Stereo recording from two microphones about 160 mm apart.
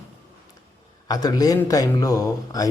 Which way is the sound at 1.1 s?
25° left (ahead or behind).